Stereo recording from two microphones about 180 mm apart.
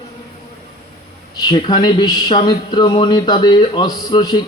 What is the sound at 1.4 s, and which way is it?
Speech, 25° left (ahead or behind).